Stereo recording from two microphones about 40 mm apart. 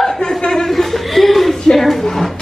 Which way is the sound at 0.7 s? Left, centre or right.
Centre.